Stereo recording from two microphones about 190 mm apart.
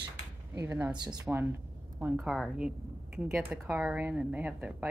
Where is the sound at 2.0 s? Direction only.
5° right (ahead or behind).